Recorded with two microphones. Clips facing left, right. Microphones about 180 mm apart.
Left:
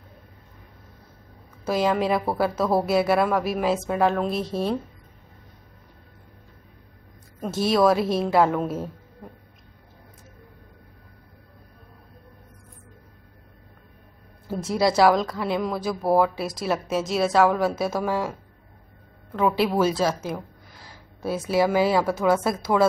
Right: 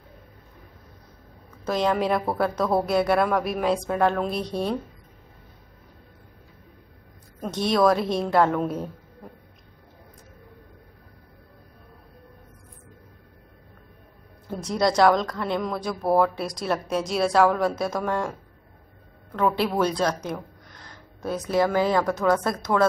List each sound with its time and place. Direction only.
1.6 s a woman's voice: 5° left (ahead or behind)
7.3 s a woman's voice: 5° left (ahead or behind)
14.5 s a woman's voice: 5° left (ahead or behind)